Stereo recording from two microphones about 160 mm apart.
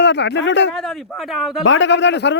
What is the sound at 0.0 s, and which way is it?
Speech, 90° left.